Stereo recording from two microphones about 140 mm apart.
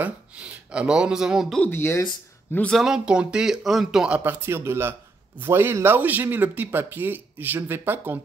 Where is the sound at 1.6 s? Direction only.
15° left (ahead or behind).